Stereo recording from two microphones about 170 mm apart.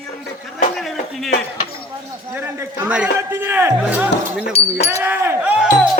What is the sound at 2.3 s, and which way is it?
Speech, 15° right (ahead or behind).